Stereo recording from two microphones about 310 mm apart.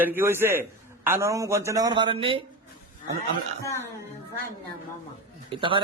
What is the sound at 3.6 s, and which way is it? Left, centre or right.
Speech, centre.